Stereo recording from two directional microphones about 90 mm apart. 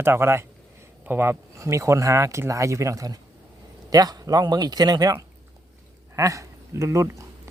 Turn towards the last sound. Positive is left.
turn(degrees=-35)  # may be behind; listen again after turning